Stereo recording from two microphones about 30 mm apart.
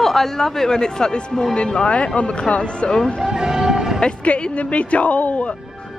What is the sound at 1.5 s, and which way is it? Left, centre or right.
Speech, left.